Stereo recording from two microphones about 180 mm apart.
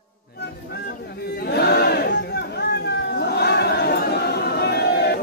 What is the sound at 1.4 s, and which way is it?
Chatter, 65° left (ahead or behind).